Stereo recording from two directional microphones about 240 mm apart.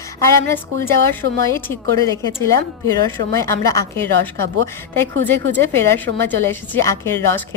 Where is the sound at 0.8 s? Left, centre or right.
Centre.